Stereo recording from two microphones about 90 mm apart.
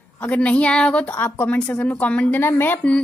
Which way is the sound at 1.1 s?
25° left (ahead or behind).